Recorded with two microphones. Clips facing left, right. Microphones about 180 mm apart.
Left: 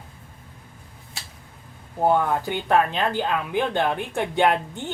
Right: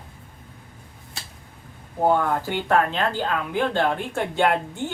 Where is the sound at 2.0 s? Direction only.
15° left (ahead or behind).